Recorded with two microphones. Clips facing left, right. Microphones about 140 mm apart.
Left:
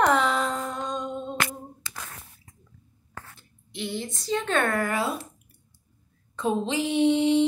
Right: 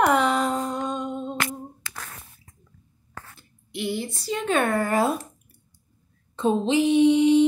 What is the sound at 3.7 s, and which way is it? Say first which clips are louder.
Speech: right 4 dB; centre (ahead or behind).